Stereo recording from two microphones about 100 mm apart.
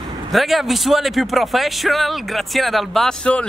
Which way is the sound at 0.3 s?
Centre (ahead or behind).